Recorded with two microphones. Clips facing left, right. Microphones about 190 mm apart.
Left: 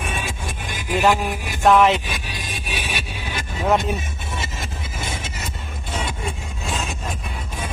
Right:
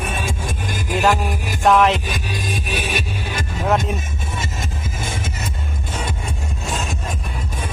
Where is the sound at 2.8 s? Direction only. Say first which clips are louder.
Right 5 dB; 45° right (ahead or behind).